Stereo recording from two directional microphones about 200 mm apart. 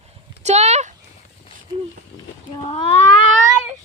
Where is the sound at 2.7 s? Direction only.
25° left (ahead or behind).